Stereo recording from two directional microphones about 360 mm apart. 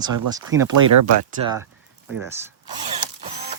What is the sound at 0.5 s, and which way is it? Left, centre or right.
Speech, right.